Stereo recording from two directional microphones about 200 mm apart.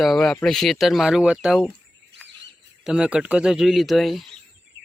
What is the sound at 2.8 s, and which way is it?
Speech, 5° right (ahead or behind).